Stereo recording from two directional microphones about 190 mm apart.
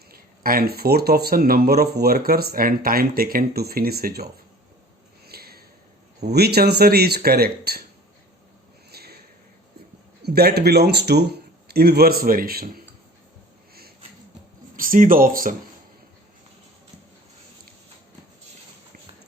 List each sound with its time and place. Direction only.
0.1 s speech: 50° right (ahead or behind)
5.2 s a sound: 55° right (ahead or behind)
6.3 s speech: 55° right (ahead or behind)
8.9 s a sound: 55° right (ahead or behind)
10.2 s speech: 55° right (ahead or behind)
14.8 s speech: 45° right (ahead or behind)